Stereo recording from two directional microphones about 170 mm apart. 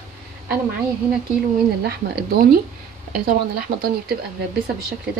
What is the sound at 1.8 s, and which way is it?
Speech, 70° right (ahead or behind).